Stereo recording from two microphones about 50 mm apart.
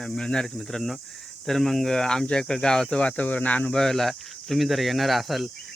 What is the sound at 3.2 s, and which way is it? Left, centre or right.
Speech, left.